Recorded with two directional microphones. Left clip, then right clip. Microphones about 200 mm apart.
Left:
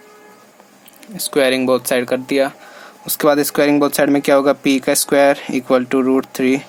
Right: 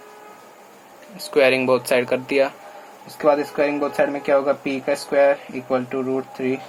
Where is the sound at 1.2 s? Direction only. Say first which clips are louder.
Left 1 dB; 40° left (ahead or behind).